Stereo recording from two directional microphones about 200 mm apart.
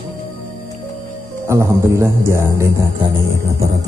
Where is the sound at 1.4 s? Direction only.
15° right (ahead or behind).